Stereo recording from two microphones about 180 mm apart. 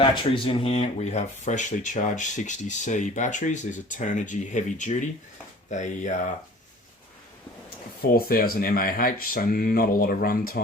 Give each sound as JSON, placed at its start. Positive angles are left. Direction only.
{"t": 0.0, "sound": "speech", "side_deg": 30}
{"t": 8.0, "sound": "speech", "side_deg": 55}